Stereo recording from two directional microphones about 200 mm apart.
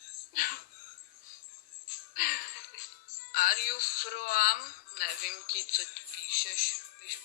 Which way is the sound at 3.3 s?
45° left (ahead or behind).